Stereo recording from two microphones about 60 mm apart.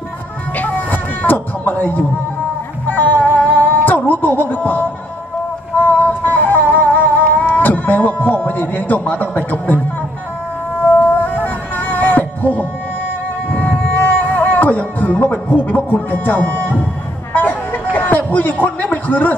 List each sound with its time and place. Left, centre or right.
0.6 s music: left
10.8 s music: left
17.3 s a sound: left
17.9 s a man's voice: left